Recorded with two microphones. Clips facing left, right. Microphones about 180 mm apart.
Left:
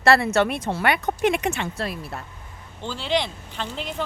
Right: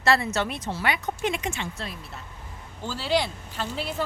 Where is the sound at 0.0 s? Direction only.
60° left (ahead or behind).